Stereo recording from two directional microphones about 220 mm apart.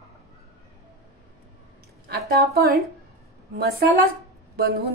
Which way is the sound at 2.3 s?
45° right (ahead or behind).